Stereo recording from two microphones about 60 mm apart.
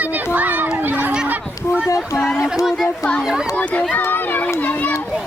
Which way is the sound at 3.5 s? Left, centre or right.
Left.